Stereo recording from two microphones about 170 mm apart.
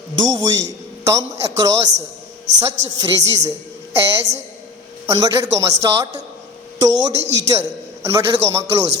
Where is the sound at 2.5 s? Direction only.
90° right.